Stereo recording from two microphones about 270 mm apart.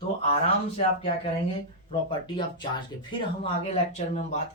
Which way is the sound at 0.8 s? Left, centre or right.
Left.